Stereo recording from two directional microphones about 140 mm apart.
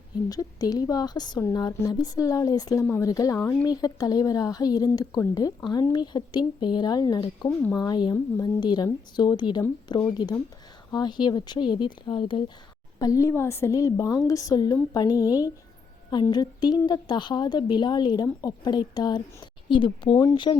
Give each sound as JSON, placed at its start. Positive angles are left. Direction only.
{"t": 0.3, "sound": "a woman's voice", "side_deg": 25}
{"t": 13.0, "sound": "a woman's voice", "side_deg": 25}